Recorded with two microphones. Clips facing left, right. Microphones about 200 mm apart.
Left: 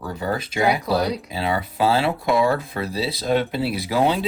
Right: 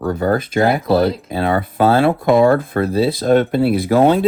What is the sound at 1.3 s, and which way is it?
Speech, 50° right (ahead or behind).